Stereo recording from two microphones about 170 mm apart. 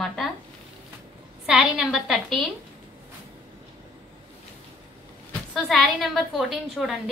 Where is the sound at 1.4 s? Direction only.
5° right (ahead or behind).